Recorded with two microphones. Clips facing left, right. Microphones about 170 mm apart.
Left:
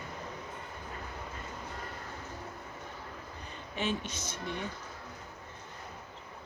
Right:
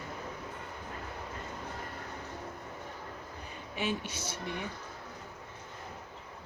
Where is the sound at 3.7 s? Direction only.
10° right (ahead or behind).